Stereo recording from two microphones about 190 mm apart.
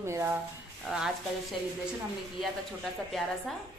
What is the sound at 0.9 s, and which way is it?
Speech, 5° right (ahead or behind).